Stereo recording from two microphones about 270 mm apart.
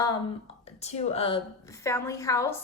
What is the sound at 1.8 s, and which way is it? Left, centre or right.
Speech, centre.